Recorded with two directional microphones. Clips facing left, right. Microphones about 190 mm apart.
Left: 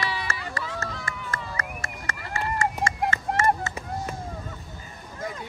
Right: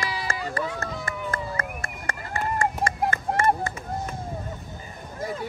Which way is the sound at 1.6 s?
55° right (ahead or behind).